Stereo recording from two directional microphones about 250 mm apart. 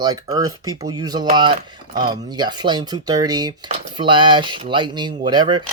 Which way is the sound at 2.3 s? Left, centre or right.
Centre.